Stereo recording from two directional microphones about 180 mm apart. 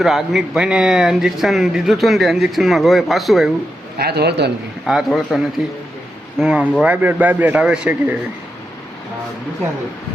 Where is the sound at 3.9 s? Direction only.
60° right (ahead or behind).